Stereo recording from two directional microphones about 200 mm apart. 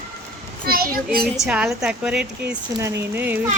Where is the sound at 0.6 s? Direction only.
45° right (ahead or behind).